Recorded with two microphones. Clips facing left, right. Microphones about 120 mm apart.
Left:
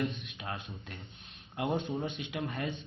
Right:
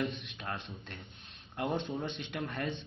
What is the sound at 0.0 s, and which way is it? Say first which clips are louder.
Speech: left 1 dB; centre (ahead or behind).